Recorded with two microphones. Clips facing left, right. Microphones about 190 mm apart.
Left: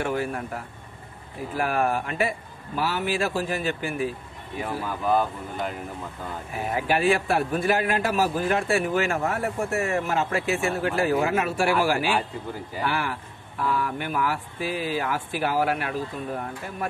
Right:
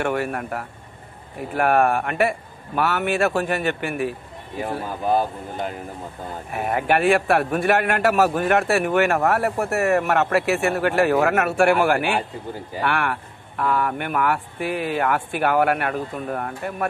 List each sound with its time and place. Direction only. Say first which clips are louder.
0.0 s a man's voice: right 3 dB; 65° right (ahead or behind)
4.8 s speech: right 2 dB; 35° right (ahead or behind)
6.5 s a man's voice: right 4 dB; 60° right (ahead or behind)